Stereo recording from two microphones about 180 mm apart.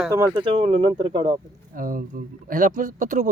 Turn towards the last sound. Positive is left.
turn(degrees=-45)  # may be behind; listen again after turning